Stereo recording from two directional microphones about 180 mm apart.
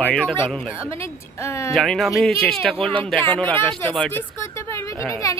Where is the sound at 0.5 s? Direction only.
Centre (ahead or behind).